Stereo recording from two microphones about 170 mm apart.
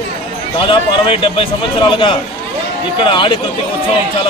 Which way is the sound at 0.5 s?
30° left (ahead or behind).